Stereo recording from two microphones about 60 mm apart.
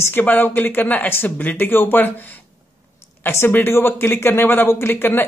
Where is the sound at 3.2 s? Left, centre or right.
Left.